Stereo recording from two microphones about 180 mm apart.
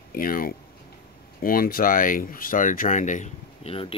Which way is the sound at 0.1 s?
55° left (ahead or behind).